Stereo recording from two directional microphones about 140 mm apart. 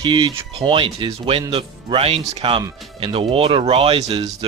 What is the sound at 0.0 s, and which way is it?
Speech, 35° right (ahead or behind).